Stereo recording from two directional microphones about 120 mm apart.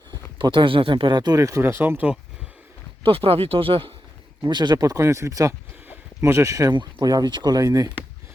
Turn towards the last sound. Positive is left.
turn(degrees=-30)  # may be behind; listen again after turning